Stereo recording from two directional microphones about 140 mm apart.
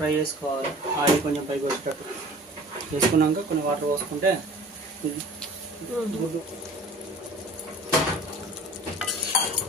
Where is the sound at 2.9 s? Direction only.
55° right (ahead or behind).